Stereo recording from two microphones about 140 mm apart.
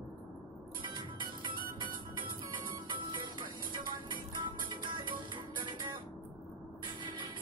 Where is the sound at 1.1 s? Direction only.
35° right (ahead or behind).